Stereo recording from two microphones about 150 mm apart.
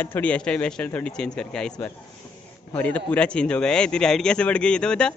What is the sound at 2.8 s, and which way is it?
Speech, 10° left (ahead or behind).